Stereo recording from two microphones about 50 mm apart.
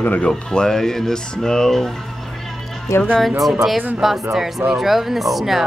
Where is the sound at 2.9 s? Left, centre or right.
Left.